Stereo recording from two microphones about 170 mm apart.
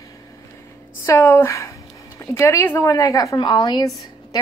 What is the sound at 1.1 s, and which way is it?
A woman's voice, 15° left (ahead or behind).